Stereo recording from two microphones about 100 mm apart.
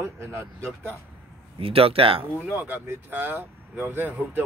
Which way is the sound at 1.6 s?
70° right (ahead or behind).